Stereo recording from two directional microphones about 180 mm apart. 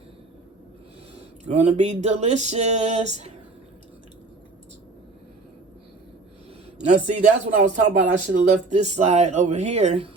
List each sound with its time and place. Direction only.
1.5 s speech: 40° right (ahead or behind)
6.7 s speech: 40° right (ahead or behind)